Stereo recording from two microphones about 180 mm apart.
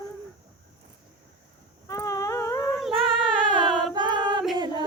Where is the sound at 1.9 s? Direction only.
20° left (ahead or behind).